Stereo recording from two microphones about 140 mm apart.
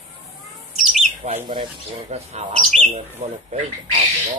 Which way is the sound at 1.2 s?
55° right (ahead or behind).